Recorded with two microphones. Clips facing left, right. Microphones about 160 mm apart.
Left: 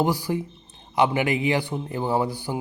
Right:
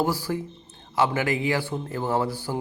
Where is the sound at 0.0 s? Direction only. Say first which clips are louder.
Left 2 dB; 15° left (ahead or behind).